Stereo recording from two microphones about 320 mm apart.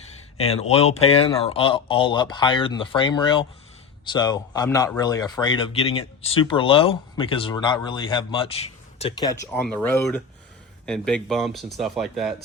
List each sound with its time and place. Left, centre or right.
0.3 s speech: centre